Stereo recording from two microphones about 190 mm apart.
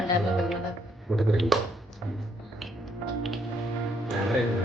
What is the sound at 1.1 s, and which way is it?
Speech, centre (ahead or behind).